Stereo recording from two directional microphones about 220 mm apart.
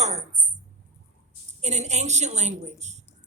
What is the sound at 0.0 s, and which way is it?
Tambourine, 30° right (ahead or behind).